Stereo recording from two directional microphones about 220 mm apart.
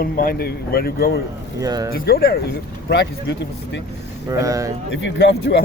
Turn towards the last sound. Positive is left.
turn(degrees=55)  # may be behind; listen again after turning